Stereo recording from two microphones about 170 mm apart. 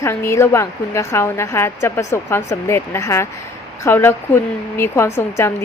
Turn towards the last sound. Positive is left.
turn(degrees=15)  # may be behind; listen again after turning